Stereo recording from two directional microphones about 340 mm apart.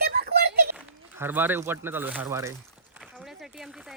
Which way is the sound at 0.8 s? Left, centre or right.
Centre.